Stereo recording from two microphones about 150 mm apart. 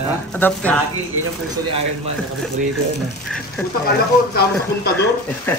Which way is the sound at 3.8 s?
90° left.